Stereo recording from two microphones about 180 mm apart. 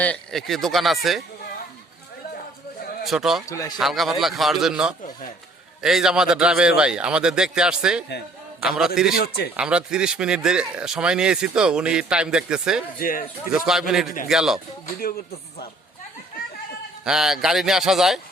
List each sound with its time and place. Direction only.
0.0 s speech: 5° left (ahead or behind)
3.0 s a man's voice: centre (ahead or behind)
3.5 s a man's voice: 15° left (ahead or behind)
3.8 s speech: centre (ahead or behind)
9.1 s speech: 60° left (ahead or behind)
9.6 s speech: 5° right (ahead or behind)
13.0 s speech: 50° left (ahead or behind)
13.7 s speech: centre (ahead or behind)
17.0 s speech: 5° right (ahead or behind)